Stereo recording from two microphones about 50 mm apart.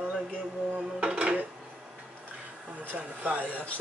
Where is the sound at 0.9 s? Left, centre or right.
Right.